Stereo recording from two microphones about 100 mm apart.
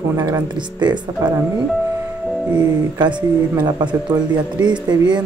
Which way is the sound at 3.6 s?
45° right (ahead or behind).